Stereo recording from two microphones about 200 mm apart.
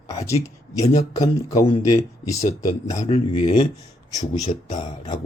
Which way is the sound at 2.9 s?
30° left (ahead or behind).